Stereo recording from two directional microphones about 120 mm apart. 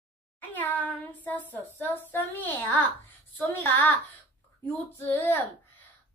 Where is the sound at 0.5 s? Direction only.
15° left (ahead or behind).